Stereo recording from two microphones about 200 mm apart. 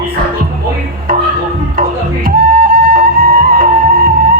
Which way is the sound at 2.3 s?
45° right (ahead or behind).